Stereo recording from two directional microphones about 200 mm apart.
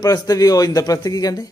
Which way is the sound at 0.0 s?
15° left (ahead or behind).